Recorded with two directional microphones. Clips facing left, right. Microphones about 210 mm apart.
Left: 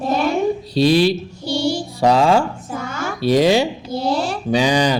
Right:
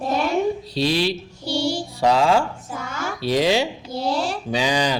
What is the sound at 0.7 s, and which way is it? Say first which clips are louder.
Speech: left 9 dB; 45° left (ahead or behind).